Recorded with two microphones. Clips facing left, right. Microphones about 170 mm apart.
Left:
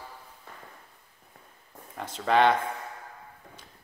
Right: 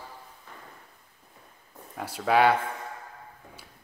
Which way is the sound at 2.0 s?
10° right (ahead or behind).